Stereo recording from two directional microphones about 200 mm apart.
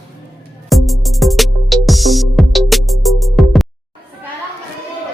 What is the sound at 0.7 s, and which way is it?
Music, centre (ahead or behind).